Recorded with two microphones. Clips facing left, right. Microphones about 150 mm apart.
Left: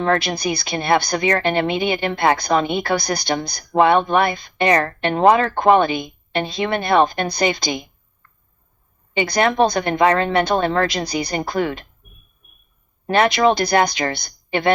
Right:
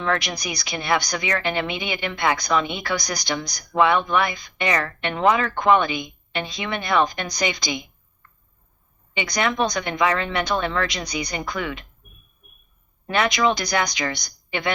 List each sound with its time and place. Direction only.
0.2 s a woman's voice: 30° left (ahead or behind)
6.6 s a woman's voice: 45° left (ahead or behind)
6.8 s a woman's voice: 30° left (ahead or behind)
9.6 s a woman's voice: 30° left (ahead or behind)
13.1 s a woman's voice: 30° left (ahead or behind)